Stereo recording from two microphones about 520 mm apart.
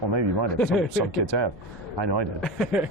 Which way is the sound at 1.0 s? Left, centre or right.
Right.